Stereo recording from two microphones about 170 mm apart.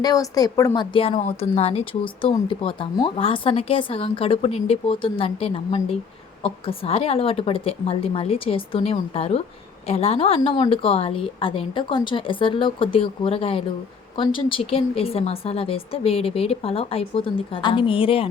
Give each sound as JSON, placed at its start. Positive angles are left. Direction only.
{"t": 0.0, "sound": "a woman's voice", "side_deg": 20}